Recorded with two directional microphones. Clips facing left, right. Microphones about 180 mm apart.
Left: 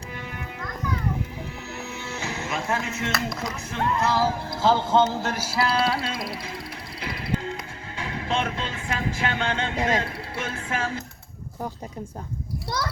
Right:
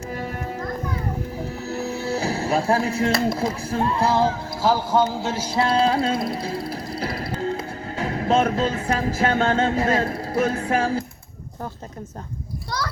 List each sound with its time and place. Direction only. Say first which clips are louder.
0.1 s music: right 8 dB; 40° right (ahead or behind)
4.9 s music: right 1 dB; 10° right (ahead or behind)
5.8 s music: right 6 dB; 35° right (ahead or behind)